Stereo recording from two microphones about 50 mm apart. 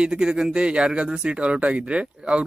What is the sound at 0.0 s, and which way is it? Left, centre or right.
Speech, centre.